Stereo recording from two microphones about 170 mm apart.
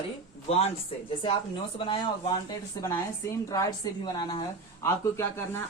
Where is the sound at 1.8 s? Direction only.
30° left (ahead or behind).